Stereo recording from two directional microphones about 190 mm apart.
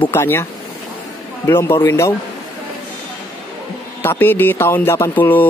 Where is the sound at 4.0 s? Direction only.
10° left (ahead or behind).